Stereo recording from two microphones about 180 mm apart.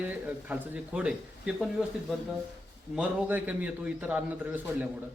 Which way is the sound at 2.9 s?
10° right (ahead or behind).